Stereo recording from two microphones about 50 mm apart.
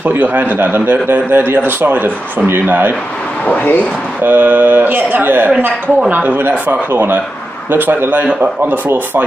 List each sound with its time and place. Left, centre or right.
0.1 s a man's voice: right
3.4 s speech: left
4.2 s a man's voice: right